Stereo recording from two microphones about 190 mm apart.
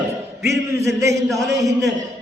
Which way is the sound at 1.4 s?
Centre (ahead or behind).